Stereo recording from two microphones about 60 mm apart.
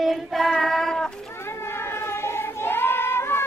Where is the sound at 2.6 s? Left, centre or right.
Left.